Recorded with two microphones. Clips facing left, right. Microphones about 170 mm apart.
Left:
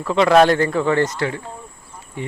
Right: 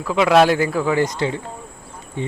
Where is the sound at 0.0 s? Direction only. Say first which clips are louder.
Left 1 dB; 5° right (ahead or behind).